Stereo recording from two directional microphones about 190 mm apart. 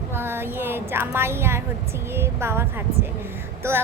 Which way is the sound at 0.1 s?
10° right (ahead or behind).